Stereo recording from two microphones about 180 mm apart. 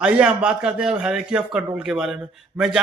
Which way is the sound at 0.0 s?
5° right (ahead or behind).